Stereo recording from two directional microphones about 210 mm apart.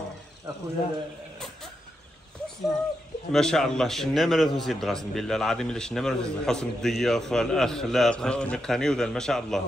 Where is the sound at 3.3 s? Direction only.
5° left (ahead or behind).